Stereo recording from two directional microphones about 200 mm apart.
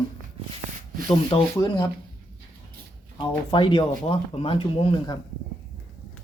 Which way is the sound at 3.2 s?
25° left (ahead or behind).